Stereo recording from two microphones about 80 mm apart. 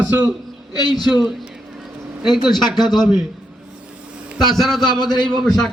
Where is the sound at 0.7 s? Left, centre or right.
Left.